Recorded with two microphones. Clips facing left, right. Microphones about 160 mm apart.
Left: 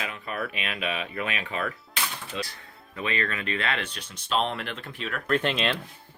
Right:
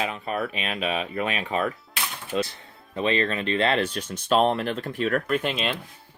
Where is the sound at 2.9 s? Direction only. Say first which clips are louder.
Right 6 dB; 30° right (ahead or behind); by 5.2 s 45° right (ahead or behind).